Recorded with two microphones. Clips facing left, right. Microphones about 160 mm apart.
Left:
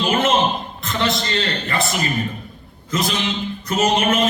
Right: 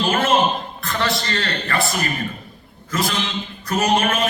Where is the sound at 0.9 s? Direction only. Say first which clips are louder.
Left 1 dB; 20° left (ahead or behind).